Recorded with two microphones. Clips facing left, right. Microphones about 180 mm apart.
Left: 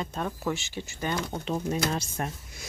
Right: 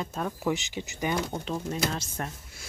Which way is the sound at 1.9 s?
15° left (ahead or behind).